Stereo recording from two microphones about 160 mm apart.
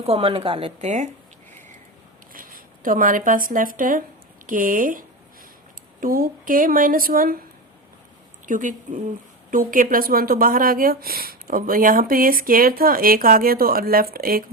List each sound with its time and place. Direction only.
0.0 s a woman's voice: 35° right (ahead or behind)
0.8 s speech: 45° right (ahead or behind)
2.3 s a woman's voice: 60° right (ahead or behind)
8.4 s a woman's voice: 55° right (ahead or behind)